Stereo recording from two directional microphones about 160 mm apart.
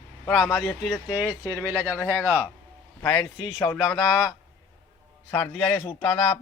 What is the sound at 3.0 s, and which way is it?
A man's voice, 20° left (ahead or behind).